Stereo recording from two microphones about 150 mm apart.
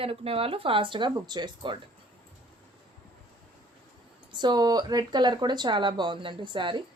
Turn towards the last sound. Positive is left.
turn(degrees=-30)  # may be behind; listen again after turning